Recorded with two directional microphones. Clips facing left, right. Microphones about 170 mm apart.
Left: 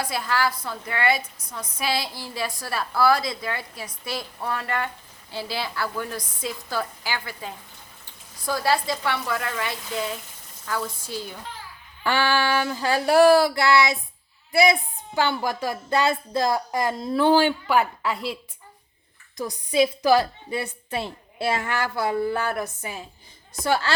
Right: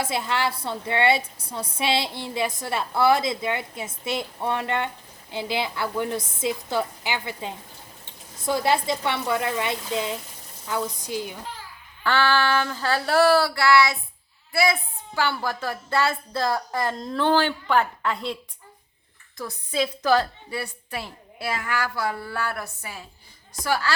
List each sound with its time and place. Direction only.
0.0 s a woman's voice: 25° right (ahead or behind)
12.0 s a woman's voice: 15° left (ahead or behind)
19.4 s a woman's voice: 15° left (ahead or behind)